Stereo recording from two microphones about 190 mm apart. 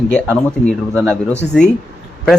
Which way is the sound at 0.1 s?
5° left (ahead or behind).